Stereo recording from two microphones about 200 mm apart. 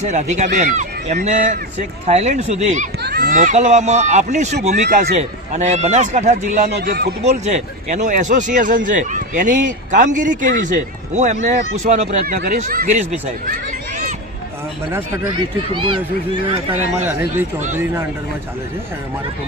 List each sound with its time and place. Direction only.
0.0 s a man's voice: 35° right (ahead or behind)
3.0 s a man's voice: 50° right (ahead or behind)
6.7 s speech: 55° right (ahead or behind)
7.3 s a man's voice: 35° right (ahead or behind)
13.5 s a sound: 40° right (ahead or behind)
14.9 s speech: 15° right (ahead or behind)
15.7 s a man's voice: 25° right (ahead or behind)
17.0 s speech: 10° right (ahead or behind)